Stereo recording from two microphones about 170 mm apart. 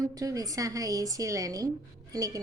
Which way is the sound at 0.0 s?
20° right (ahead or behind).